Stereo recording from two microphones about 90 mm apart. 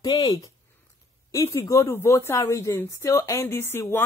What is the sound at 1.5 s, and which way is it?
Speech, 35° left (ahead or behind).